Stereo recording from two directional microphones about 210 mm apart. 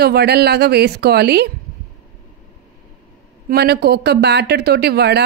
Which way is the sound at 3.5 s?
50° right (ahead or behind).